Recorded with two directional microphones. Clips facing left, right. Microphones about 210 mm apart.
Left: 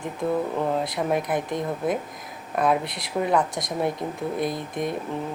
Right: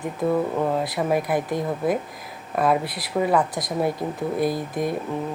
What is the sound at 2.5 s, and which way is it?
Speech, 5° right (ahead or behind).